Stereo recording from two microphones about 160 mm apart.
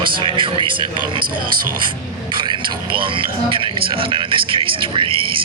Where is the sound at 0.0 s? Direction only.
30° right (ahead or behind).